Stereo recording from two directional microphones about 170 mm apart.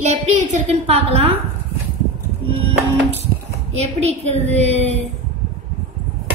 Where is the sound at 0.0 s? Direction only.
45° right (ahead or behind).